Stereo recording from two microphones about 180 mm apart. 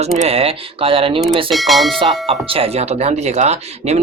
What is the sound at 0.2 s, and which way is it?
Speech, 35° right (ahead or behind).